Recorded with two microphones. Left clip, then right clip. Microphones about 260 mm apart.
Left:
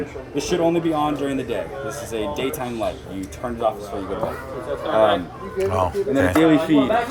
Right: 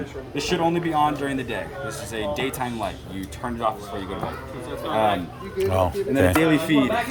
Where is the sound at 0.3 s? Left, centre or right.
Right.